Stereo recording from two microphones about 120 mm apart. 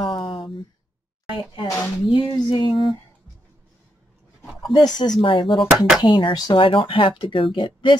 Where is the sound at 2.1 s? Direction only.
40° left (ahead or behind).